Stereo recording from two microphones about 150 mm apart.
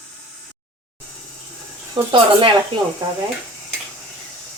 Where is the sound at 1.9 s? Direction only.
35° right (ahead or behind).